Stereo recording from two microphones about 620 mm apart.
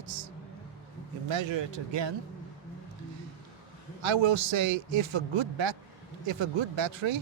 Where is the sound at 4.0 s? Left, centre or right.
Right.